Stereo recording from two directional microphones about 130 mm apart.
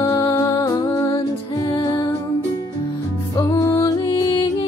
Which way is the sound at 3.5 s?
25° left (ahead or behind).